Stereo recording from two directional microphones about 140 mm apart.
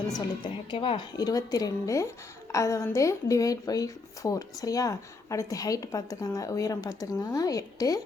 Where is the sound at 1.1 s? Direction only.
25° left (ahead or behind).